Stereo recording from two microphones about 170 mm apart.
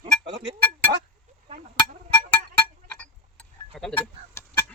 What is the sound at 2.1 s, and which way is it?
Music, 10° left (ahead or behind).